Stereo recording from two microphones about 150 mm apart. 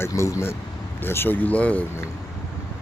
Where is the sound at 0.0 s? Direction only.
20° left (ahead or behind).